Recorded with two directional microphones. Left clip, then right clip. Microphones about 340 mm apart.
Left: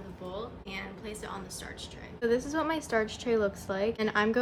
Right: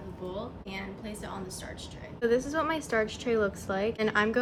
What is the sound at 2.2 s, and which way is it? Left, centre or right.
A woman's voice, centre.